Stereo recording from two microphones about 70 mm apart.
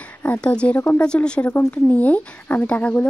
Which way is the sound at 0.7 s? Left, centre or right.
Left.